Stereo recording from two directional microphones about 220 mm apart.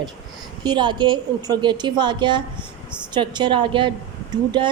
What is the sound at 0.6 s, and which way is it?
A woman's voice, 20° right (ahead or behind).